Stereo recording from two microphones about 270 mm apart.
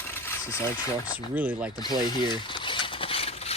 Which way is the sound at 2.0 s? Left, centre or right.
Centre.